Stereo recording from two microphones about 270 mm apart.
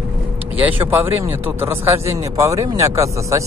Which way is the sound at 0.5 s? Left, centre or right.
Centre.